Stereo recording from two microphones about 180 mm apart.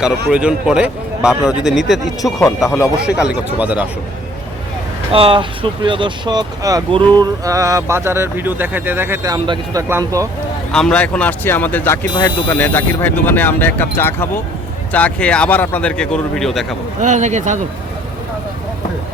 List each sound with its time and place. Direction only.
0.0 s speech: 5° right (ahead or behind)
2.6 s speech: 15° left (ahead or behind)
3.0 s speech: 5° right (ahead or behind)
5.1 s speech: 30° right (ahead or behind)
10.7 s speech: 5° left (ahead or behind)
17.0 s speech: 40° right (ahead or behind)